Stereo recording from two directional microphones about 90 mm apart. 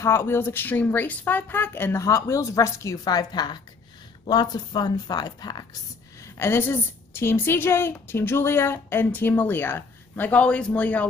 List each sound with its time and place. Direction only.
0.0 s a woman's voice: 30° left (ahead or behind); by 5.6 s 50° left (ahead or behind)
6.3 s a woman's voice: 25° left (ahead or behind)